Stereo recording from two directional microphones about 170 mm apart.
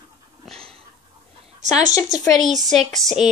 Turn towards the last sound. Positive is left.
turn(degrees=0)  # may be behind; listen again after turning